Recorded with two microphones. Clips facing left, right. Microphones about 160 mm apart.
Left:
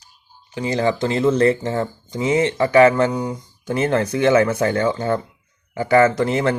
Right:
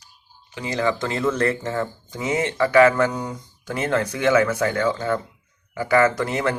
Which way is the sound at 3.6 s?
25° left (ahead or behind).